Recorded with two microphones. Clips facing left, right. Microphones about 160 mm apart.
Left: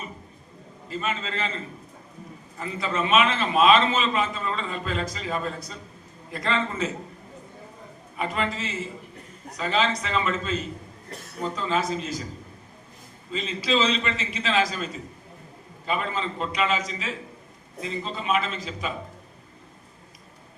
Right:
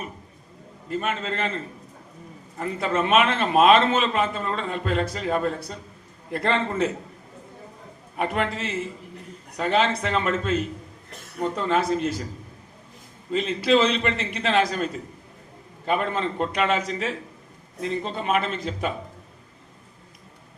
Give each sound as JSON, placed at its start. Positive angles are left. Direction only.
{"t": 0.9, "sound": "a man's voice", "side_deg": -60}
{"t": 2.6, "sound": "a man's voice", "side_deg": -60}
{"t": 8.1, "sound": "a man's voice", "side_deg": -60}
{"t": 13.3, "sound": "a man's voice", "side_deg": -60}